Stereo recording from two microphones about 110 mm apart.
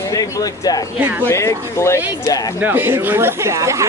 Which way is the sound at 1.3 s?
25° left (ahead or behind).